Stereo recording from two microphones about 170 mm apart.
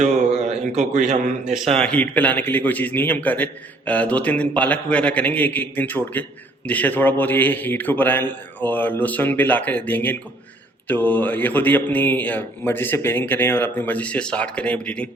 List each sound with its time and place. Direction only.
0.0 s a sound: 45° right (ahead or behind)
0.8 s a man's voice: 45° right (ahead or behind)
1.7 s a man's voice: 5° left (ahead or behind)